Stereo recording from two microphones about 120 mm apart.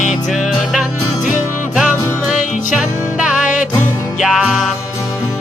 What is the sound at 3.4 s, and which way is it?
Music, 90° left.